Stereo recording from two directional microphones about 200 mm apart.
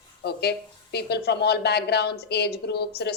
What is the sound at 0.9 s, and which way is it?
A woman's voice, 55° left (ahead or behind).